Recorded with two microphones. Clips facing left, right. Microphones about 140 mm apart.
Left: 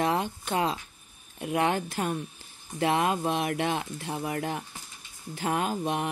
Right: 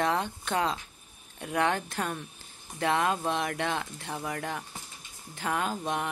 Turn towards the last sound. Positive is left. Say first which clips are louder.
# left 2 dB
turn(degrees=15)  # may be behind; listen again after turning